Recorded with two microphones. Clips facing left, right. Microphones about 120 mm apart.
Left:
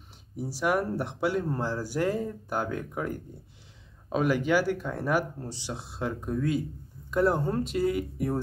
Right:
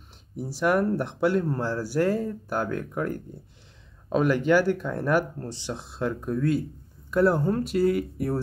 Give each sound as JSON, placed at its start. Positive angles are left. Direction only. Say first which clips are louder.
{"t": 0.4, "sound": "speech", "louder": "right 4 dB", "side_deg": 10}